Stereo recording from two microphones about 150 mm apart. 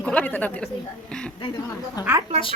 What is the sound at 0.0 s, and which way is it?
A woman's voice, 10° left (ahead or behind).